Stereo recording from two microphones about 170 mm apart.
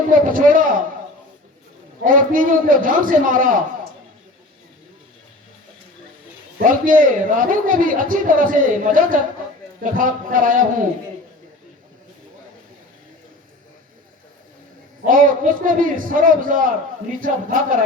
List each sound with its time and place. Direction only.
0.1 s a woman's voice: 50° right (ahead or behind)
2.0 s a woman's voice: 55° right (ahead or behind)
6.6 s a woman's voice: 50° right (ahead or behind)
15.0 s a woman's voice: 50° right (ahead or behind)